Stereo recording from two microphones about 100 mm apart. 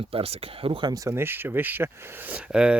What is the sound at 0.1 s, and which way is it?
Speech, 75° right (ahead or behind).